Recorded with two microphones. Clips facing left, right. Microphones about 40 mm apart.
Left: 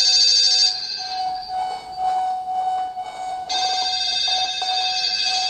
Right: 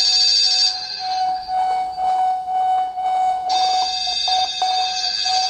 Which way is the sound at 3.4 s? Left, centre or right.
Left.